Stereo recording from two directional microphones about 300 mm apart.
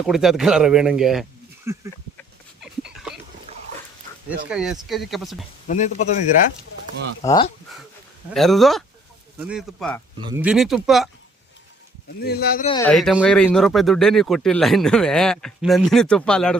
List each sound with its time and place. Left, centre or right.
0.0 s speech: centre
2.9 s a sound: centre
3.5 s dog: centre
4.4 s speech: centre
5.6 s a man's voice: left
7.2 s speech: centre
8.3 s speech: centre
12.2 s speech: left
12.6 s speech: centre
12.9 s speech: centre